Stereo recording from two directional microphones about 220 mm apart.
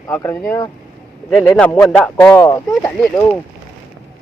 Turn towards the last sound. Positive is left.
turn(degrees=10)  # may be behind; listen again after turning